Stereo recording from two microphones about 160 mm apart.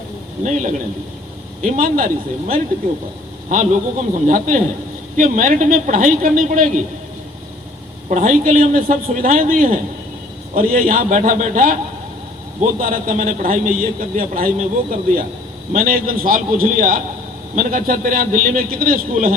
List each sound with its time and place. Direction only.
0.4 s a man's voice: 50° right (ahead or behind)
3.5 s a man's voice: 55° right (ahead or behind)
8.1 s a man's voice: 55° right (ahead or behind)
12.8 s a man's voice: 55° right (ahead or behind)